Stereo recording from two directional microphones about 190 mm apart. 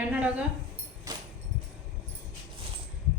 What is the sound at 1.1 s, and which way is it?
Music, 20° right (ahead or behind).